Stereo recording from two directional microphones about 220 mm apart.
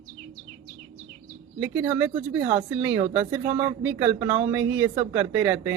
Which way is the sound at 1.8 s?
20° right (ahead or behind).